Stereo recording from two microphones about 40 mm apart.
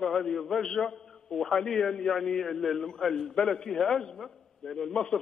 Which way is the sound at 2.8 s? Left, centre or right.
Centre.